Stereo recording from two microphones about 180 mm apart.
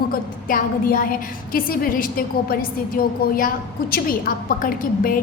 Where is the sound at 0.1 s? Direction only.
50° left (ahead or behind).